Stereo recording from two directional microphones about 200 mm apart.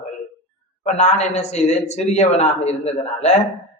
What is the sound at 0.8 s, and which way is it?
A man's voice, 35° left (ahead or behind).